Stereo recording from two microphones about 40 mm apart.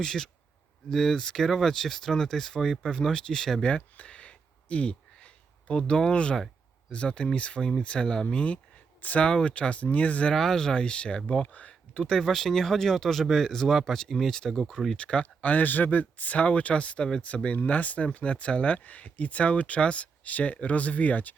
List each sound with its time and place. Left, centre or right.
0.0 s speech: centre
1.5 s speech: centre
3.6 s a sound: left
6.9 s speech: left
9.0 s speech: left
9.2 s speech: left
10.3 s speech: centre; by 11.7 s left
11.9 s speech: centre
13.7 s speech: centre
14.9 s speech: left